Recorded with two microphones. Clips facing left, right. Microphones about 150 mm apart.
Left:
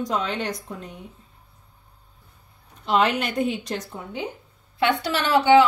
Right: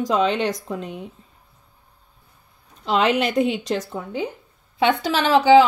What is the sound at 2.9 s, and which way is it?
Speech, 90° right.